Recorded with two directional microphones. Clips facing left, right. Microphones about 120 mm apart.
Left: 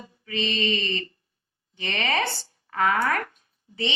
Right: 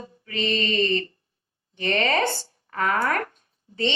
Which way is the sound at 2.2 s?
35° right (ahead or behind).